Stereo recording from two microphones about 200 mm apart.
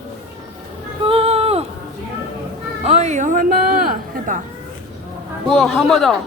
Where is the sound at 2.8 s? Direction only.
35° right (ahead or behind).